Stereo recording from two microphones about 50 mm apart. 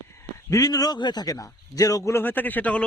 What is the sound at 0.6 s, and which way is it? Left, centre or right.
Speech, left.